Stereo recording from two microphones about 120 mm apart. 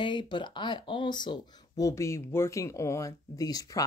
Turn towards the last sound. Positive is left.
turn(degrees=30)  # may be behind; listen again after turning